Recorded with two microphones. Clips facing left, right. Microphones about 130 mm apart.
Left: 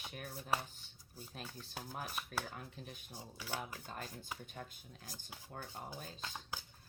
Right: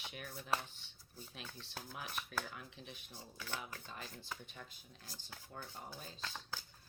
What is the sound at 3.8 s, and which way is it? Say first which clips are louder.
Speech: left 3 dB; 45° left (ahead or behind).